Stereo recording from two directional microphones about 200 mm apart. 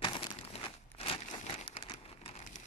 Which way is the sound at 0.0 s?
25° left (ahead or behind).